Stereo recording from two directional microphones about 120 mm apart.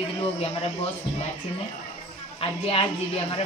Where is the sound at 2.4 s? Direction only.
50° left (ahead or behind).